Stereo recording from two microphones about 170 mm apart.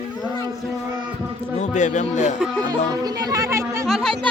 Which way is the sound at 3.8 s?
Centre (ahead or behind).